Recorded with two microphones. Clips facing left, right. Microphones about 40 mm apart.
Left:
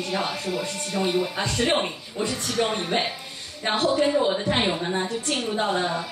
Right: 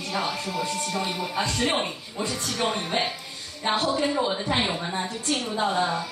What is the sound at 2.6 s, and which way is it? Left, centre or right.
Speech, centre.